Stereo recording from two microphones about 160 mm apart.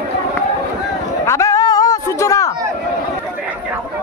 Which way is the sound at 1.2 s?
20° left (ahead or behind).